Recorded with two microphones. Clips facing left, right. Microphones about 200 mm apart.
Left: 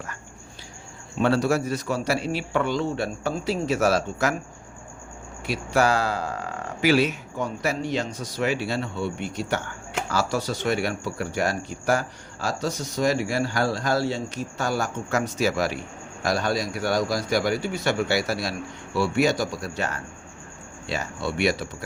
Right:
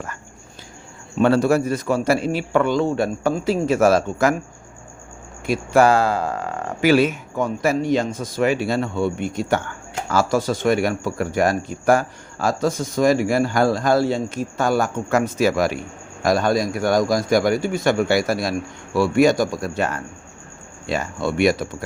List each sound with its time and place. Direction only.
1.2 s speech: 50° right (ahead or behind)
5.5 s speech: 50° right (ahead or behind)